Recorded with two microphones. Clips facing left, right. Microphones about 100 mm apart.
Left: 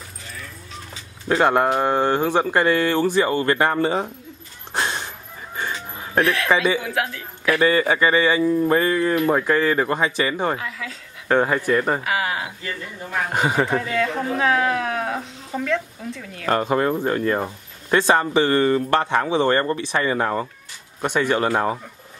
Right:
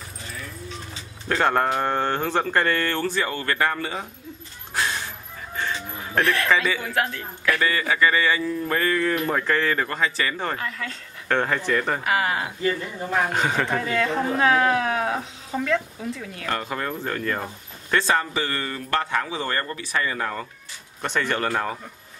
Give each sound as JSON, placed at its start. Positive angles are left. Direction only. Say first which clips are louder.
{"t": 1.3, "sound": "speech", "louder": "left 4 dB", "side_deg": 10}
{"t": 4.7, "sound": "a sound", "louder": "left 2 dB", "side_deg": 25}
{"t": 5.6, "sound": "music", "louder": "even", "side_deg": 15}
{"t": 6.2, "sound": "speech", "louder": "right 1 dB", "side_deg": 0}
{"t": 6.5, "sound": "speech", "louder": "left 5 dB", "side_deg": 15}
{"t": 6.8, "sound": "speech", "louder": "even", "side_deg": 0}
{"t": 7.6, "sound": "speech", "louder": "left 5 dB", "side_deg": 25}
{"t": 10.6, "sound": "speech", "louder": "even", "side_deg": 5}
{"t": 11.2, "sound": "speech", "louder": "left 4 dB", "side_deg": 15}
{"t": 12.0, "sound": "speech", "louder": "right 1 dB", "side_deg": 0}
{"t": 16.4, "sound": "speech", "louder": "left 9 dB", "side_deg": 30}
{"t": 21.0, "sound": "speech", "louder": "left 5 dB", "side_deg": 15}